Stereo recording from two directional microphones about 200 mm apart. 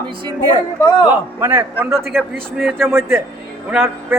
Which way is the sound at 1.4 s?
10° right (ahead or behind).